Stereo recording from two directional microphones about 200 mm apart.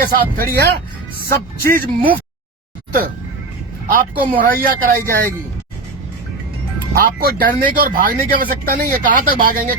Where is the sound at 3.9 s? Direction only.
45° right (ahead or behind).